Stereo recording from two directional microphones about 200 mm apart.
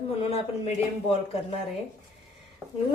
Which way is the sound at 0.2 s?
30° left (ahead or behind).